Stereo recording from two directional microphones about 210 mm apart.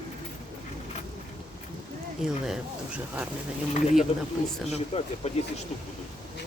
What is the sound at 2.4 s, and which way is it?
Speech, 5° right (ahead or behind).